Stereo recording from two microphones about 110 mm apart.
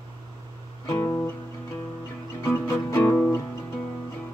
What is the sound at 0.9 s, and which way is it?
Music, 15° left (ahead or behind).